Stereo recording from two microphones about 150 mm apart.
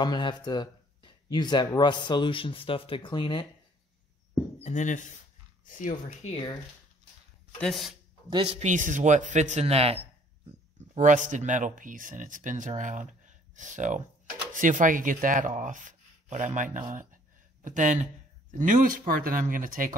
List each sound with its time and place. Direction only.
0.0 s speech: 30° left (ahead or behind)
4.6 s speech: 50° left (ahead or behind)
7.6 s speech: centre (ahead or behind)
8.3 s speech: 30° right (ahead or behind)
8.5 s speech: 55° right (ahead or behind)
11.0 s speech: 55° right (ahead or behind)